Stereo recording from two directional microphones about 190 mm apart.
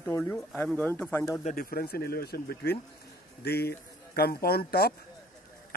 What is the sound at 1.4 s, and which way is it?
A man's voice, 45° left (ahead or behind).